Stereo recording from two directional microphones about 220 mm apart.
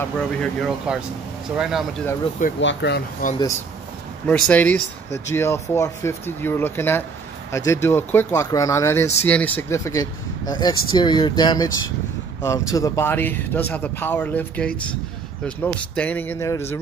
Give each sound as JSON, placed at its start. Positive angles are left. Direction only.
{"t": 0.2, "sound": "speech", "side_deg": 0}
{"t": 2.6, "sound": "speech", "side_deg": 55}
{"t": 4.3, "sound": "speech", "side_deg": 5}